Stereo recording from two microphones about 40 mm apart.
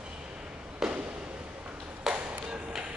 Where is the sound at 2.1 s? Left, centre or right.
Centre.